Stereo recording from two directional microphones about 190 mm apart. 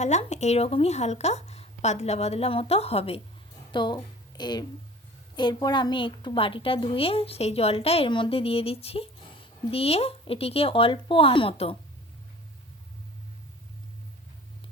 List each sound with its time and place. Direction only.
0.0 s a woman's voice: 35° left (ahead or behind)